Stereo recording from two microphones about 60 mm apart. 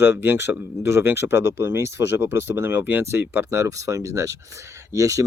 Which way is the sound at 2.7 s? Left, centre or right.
Right.